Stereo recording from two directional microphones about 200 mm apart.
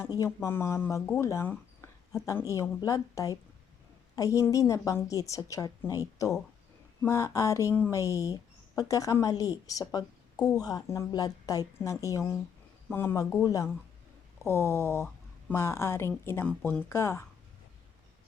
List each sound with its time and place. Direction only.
0.0 s a woman's voice: 15° left (ahead or behind)
7.0 s a woman's voice: 15° left (ahead or behind)